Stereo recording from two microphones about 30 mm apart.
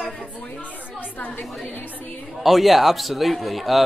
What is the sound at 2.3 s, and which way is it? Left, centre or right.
A man's voice, centre.